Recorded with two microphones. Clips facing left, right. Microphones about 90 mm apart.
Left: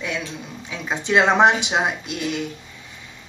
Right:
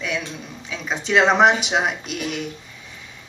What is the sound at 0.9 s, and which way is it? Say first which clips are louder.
Speech: even; 5° left (ahead or behind).